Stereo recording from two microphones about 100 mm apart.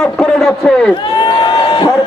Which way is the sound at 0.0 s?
5° left (ahead or behind).